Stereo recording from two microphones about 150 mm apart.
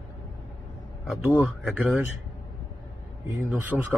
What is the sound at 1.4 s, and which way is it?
Speech, centre (ahead or behind).